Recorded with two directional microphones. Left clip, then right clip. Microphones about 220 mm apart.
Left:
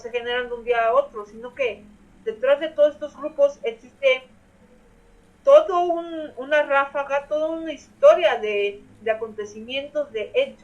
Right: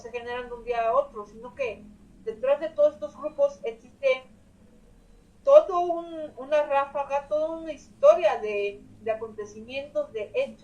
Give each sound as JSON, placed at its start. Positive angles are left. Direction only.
{"t": 0.0, "sound": "speech", "side_deg": 35}
{"t": 1.1, "sound": "a woman's voice", "side_deg": 50}
{"t": 2.2, "sound": "speech", "side_deg": 35}
{"t": 5.5, "sound": "speech", "side_deg": 35}